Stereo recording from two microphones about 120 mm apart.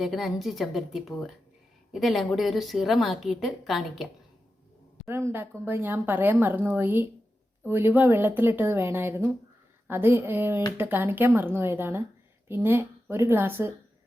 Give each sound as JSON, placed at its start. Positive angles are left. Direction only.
{"t": 0.0, "sound": "a woman's voice", "side_deg": 0}
{"t": 5.0, "sound": "a woman's voice", "side_deg": -20}